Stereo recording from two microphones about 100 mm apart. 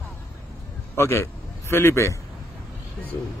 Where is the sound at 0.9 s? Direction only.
25° left (ahead or behind).